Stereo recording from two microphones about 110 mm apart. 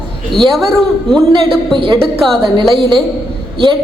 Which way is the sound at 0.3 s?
5° left (ahead or behind).